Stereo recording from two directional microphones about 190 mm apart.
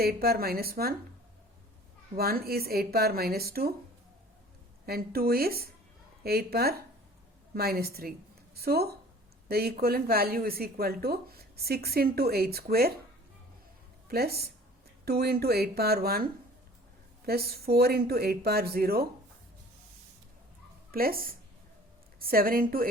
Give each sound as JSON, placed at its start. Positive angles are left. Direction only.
{"t": 0.0, "sound": "speech", "side_deg": -55}
{"t": 2.1, "sound": "speech", "side_deg": -55}
{"t": 4.9, "sound": "speech", "side_deg": -55}
{"t": 14.1, "sound": "speech", "side_deg": -55}
{"t": 17.2, "sound": "speech", "side_deg": -55}
{"t": 20.9, "sound": "speech", "side_deg": -50}